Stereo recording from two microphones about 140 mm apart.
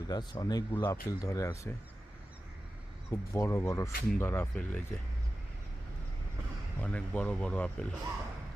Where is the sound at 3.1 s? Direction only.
20° left (ahead or behind).